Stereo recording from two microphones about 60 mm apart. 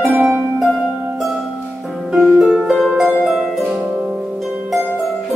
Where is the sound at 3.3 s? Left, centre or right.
Centre.